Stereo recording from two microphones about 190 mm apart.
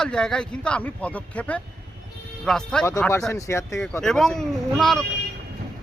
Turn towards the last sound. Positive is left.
turn(degrees=0)  # may be behind; listen again after turning